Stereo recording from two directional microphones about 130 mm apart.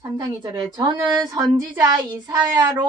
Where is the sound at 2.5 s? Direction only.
35° right (ahead or behind).